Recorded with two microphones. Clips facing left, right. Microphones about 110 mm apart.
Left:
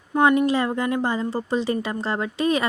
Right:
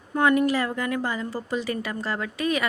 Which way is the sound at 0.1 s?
20° left (ahead or behind).